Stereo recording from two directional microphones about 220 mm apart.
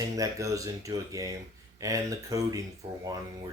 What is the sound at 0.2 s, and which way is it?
Speech, 15° right (ahead or behind).